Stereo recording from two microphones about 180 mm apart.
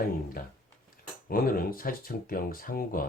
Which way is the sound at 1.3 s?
55° left (ahead or behind).